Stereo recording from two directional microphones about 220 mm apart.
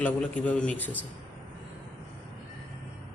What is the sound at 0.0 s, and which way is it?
Speech, 5° left (ahead or behind).